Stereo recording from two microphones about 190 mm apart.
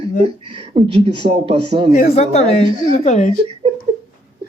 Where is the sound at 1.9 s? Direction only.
35° left (ahead or behind).